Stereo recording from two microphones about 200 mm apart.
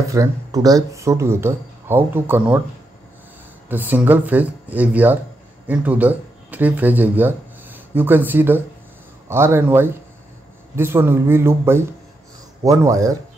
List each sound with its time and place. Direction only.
0.1 s speech: 15° right (ahead or behind)
3.6 s speech: 10° right (ahead or behind)